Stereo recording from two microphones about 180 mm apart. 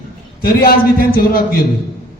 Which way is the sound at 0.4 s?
55° left (ahead or behind).